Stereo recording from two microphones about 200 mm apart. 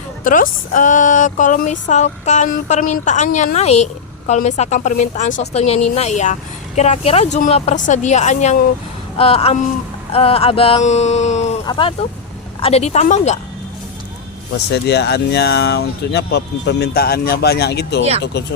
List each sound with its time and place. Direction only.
0.3 s speech: 40° left (ahead or behind)
9.1 s a sound: 30° left (ahead or behind)
10.1 s speech: 30° left (ahead or behind)
11.6 s a sound: 25° left (ahead or behind)
12.6 s speech: 30° left (ahead or behind)
14.7 s speech: 55° left (ahead or behind)